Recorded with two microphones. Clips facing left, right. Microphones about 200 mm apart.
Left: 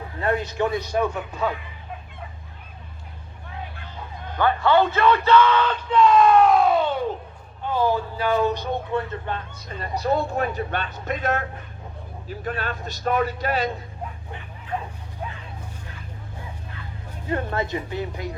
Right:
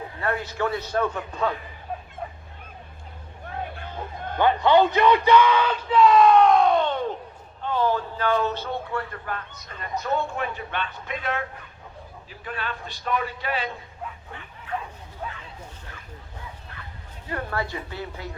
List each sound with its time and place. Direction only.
0.2 s a man's voice: 20° left (ahead or behind)
3.4 s a sound: 50° right (ahead or behind)
4.4 s speech: 20° right (ahead or behind); by 13.7 s 40° left (ahead or behind)
17.2 s a woman's voice: 25° left (ahead or behind)